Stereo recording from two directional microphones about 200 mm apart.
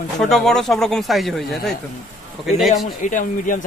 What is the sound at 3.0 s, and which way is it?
Speech, 40° left (ahead or behind).